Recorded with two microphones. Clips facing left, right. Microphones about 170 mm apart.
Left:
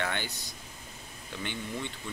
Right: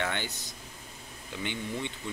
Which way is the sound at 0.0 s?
20° right (ahead or behind).